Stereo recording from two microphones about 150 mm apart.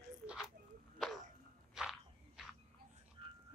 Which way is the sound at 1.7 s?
5° right (ahead or behind).